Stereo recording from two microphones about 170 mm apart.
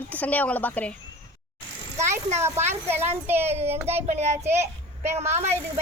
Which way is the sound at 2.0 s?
15° right (ahead or behind).